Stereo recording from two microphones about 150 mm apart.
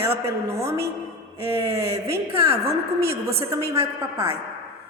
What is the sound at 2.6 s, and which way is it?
Speech, 90° right.